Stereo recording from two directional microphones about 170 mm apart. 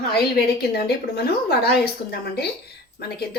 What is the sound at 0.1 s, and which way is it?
A woman's voice, 70° left (ahead or behind).